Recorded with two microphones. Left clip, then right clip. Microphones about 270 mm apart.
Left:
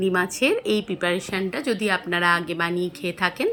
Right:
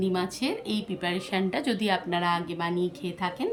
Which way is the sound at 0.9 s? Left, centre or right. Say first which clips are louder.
Left 5 dB; centre.